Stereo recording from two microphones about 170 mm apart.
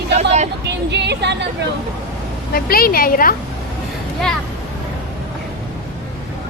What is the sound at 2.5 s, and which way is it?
Speech, 60° left (ahead or behind).